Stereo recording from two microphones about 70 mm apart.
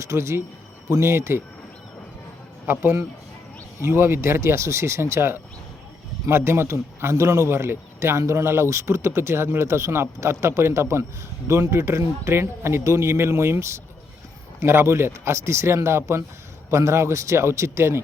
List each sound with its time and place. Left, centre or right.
0.0 s speech: right
3.8 s speech: right